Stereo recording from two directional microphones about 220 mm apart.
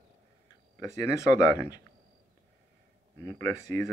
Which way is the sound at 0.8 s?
15° left (ahead or behind).